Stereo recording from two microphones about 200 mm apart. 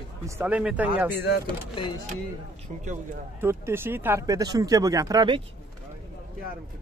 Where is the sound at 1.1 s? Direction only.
50° left (ahead or behind).